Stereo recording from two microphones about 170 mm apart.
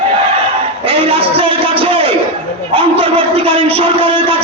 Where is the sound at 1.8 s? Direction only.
30° right (ahead or behind).